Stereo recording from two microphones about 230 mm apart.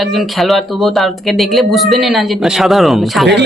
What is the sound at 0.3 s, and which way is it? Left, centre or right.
Speech, centre.